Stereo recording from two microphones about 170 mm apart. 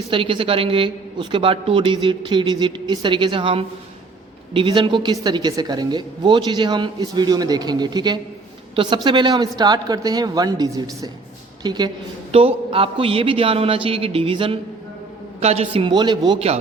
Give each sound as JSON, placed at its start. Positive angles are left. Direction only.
{"t": 0.1, "sound": "a woman's voice", "side_deg": -30}
{"t": 12.3, "sound": "a man's voice", "side_deg": -35}